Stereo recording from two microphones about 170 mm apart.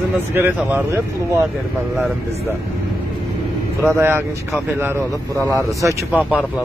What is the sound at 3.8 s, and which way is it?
Speech, 15° right (ahead or behind).